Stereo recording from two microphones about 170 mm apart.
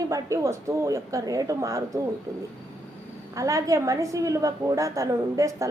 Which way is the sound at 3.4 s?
20° right (ahead or behind).